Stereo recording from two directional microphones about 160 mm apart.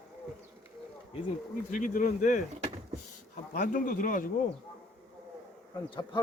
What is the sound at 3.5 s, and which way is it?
Speech, 55° left (ahead or behind).